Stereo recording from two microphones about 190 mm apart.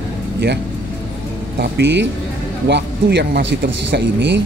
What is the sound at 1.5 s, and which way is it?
Speech, 65° right (ahead or behind).